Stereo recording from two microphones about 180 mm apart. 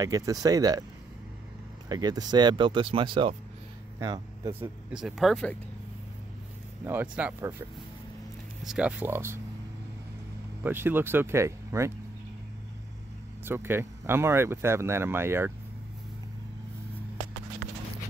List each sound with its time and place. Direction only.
0.0 s speech: 20° right (ahead or behind)
1.9 s speech: 20° right (ahead or behind)
4.9 s speech: centre (ahead or behind)
6.8 s speech: 10° right (ahead or behind)
8.6 s speech: 5° right (ahead or behind)
10.6 s speech: 10° right (ahead or behind)
13.5 s speech: 15° right (ahead or behind)